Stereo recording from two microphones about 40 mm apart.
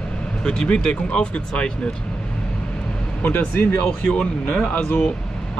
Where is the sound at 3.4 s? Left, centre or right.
Left.